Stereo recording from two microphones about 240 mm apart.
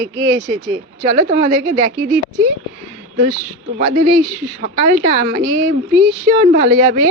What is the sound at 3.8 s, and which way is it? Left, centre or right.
Speech, right.